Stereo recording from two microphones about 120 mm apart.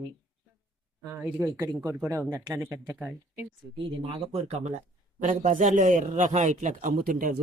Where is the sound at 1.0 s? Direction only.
20° right (ahead or behind).